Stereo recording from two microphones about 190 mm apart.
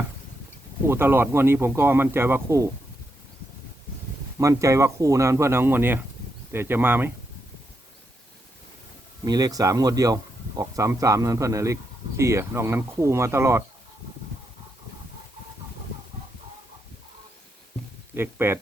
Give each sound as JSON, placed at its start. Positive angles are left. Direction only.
{"t": 0.9, "sound": "speech", "side_deg": -10}
{"t": 4.4, "sound": "speech", "side_deg": -15}
{"t": 9.2, "sound": "speech", "side_deg": -20}
{"t": 18.2, "sound": "speech", "side_deg": -10}